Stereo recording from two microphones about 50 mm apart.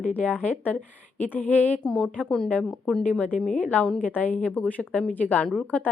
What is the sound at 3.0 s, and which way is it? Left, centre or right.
Speech, left.